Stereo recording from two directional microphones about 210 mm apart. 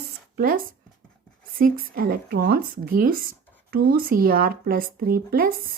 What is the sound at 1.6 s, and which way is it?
A woman's voice, 45° right (ahead or behind).